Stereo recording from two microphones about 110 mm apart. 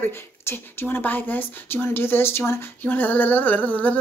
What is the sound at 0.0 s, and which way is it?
Speech, 20° left (ahead or behind).